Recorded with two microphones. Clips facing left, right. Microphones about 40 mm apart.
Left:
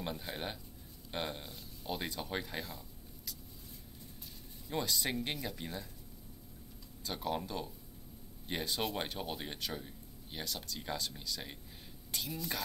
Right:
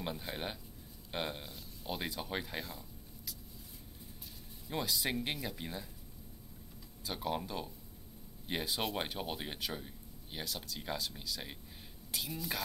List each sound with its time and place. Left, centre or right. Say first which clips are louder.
0.0 s speech: even; centre
4.6 s speech: even; centre
7.1 s speech: even; centre